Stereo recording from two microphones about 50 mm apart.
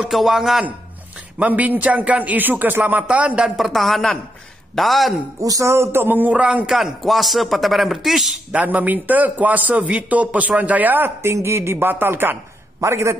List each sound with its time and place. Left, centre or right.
0.0 s speech: centre
1.4 s a man's voice: right
3.4 s speech: centre
5.6 s speech: right
6.0 s a man's voice: right
6.4 s speech: right
6.7 s speech: centre
8.5 s a man's voice: right
11.2 s speech: right
11.9 s speech: right
12.8 s speech: right